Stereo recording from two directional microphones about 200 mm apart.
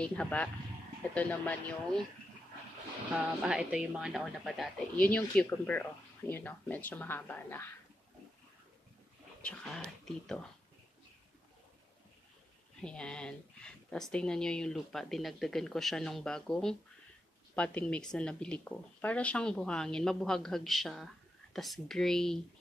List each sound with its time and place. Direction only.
0.0 s speech: 5° left (ahead or behind)
3.4 s speech: 5° right (ahead or behind)
9.4 s speech: 5° left (ahead or behind)
12.8 s speech: 5° left (ahead or behind)